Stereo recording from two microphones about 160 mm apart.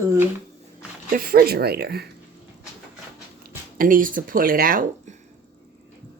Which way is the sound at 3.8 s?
60° right (ahead or behind).